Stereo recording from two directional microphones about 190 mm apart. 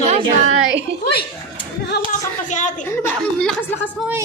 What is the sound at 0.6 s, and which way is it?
Speech, 70° right (ahead or behind).